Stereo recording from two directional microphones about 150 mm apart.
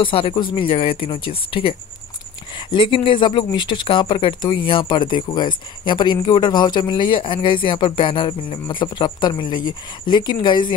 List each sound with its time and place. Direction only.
0.0 s speech: 35° left (ahead or behind)